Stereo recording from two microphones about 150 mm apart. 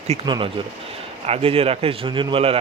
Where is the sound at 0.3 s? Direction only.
35° right (ahead or behind).